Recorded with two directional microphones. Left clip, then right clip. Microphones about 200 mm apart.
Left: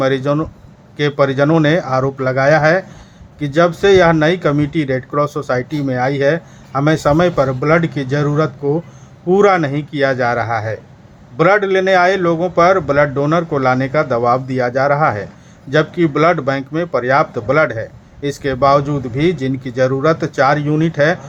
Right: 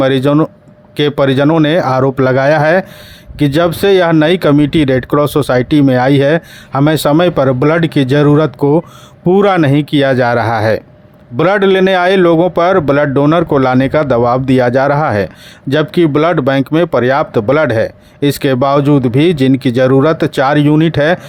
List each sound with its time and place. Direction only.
0.0 s speech: 45° right (ahead or behind)